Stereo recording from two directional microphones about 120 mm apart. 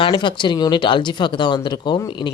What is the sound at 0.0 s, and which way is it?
Speech, 40° left (ahead or behind).